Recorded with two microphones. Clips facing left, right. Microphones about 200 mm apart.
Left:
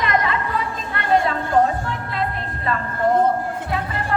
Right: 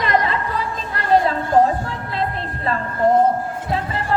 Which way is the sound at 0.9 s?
35° right (ahead or behind).